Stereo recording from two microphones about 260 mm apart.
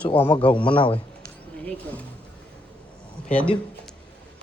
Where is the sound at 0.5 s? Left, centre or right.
Centre.